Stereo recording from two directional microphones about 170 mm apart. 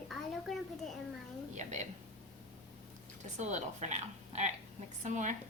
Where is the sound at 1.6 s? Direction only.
45° right (ahead or behind).